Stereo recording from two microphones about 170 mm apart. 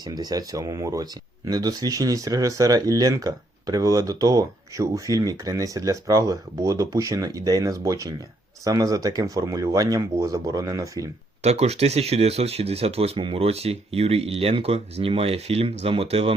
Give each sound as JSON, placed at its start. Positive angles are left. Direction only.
{"t": 0.0, "sound": "speech", "side_deg": -25}
{"t": 11.4, "sound": "speech", "side_deg": -40}